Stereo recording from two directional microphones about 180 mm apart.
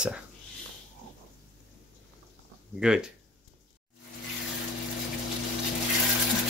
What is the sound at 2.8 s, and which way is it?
Speech, 5° right (ahead or behind).